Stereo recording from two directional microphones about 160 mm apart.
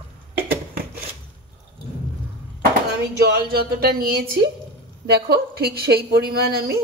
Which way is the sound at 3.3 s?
80° right.